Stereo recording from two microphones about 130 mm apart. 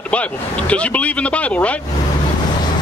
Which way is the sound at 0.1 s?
10° left (ahead or behind).